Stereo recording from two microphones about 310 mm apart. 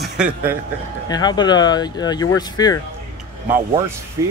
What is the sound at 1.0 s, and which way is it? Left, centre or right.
Speech, centre.